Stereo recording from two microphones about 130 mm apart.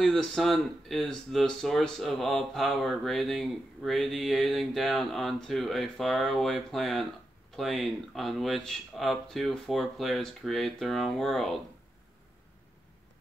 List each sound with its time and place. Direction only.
0.0 s speech: 5° left (ahead or behind)